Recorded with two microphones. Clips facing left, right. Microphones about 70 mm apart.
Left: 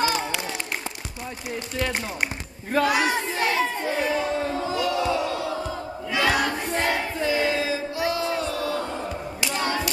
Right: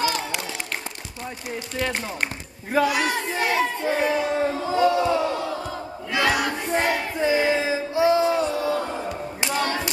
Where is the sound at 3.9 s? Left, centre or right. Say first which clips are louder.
Right 2 dB; centre.